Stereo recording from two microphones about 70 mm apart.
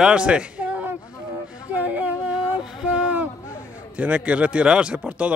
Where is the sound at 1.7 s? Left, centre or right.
Right.